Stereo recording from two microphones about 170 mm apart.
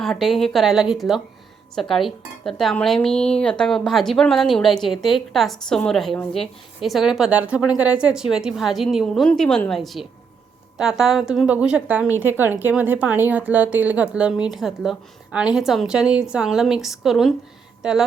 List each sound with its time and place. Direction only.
0.0 s a woman's voice: centre (ahead or behind)